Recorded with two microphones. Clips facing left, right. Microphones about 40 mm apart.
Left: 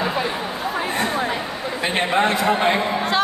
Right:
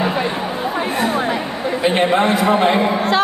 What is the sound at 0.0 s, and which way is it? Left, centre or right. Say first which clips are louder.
Chatter: right 3 dB; centre.